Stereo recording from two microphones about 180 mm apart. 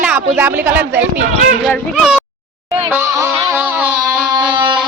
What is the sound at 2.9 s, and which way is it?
Music, 15° right (ahead or behind).